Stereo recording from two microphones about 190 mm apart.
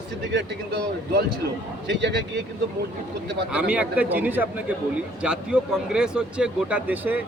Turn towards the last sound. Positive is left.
turn(degrees=-10)  # may be behind; listen again after turning